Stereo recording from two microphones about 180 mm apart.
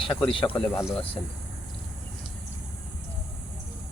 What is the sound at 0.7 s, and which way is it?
Speech, 10° left (ahead or behind).